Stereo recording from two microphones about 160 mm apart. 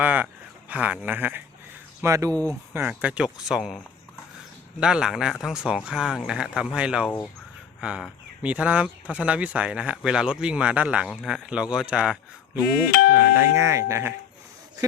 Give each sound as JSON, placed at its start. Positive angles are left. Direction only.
{"t": 0.0, "sound": "a sound", "side_deg": -10}
{"t": 0.7, "sound": "speech", "side_deg": -10}
{"t": 4.8, "sound": "speech", "side_deg": -5}
{"t": 12.9, "sound": "speech", "side_deg": 70}
{"t": 13.1, "sound": "speech", "side_deg": -15}